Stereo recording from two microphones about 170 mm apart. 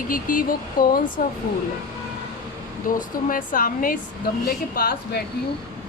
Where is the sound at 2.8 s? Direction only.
50° left (ahead or behind).